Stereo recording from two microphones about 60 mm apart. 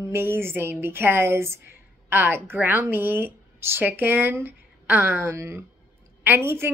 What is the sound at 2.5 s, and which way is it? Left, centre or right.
A woman's voice, right.